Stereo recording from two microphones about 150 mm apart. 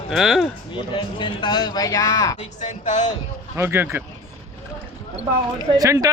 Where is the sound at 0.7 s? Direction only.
35° left (ahead or behind).